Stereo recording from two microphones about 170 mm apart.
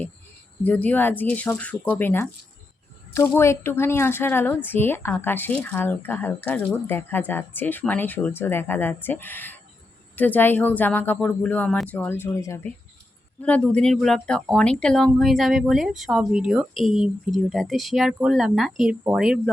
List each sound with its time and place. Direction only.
0.6 s a woman's voice: 10° left (ahead or behind)
13.4 s speech: 5° left (ahead or behind)